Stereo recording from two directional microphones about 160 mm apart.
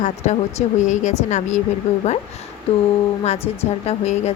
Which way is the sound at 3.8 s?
45° left (ahead or behind).